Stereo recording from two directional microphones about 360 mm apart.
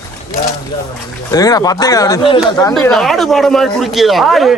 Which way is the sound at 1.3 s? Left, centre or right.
Centre.